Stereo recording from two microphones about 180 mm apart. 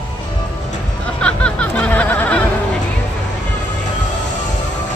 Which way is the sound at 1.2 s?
5° left (ahead or behind).